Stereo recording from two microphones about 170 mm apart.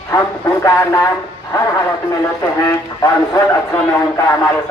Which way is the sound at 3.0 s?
20° left (ahead or behind).